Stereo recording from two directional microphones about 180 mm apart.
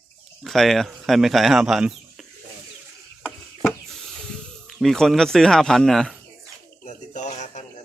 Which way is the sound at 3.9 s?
Centre (ahead or behind).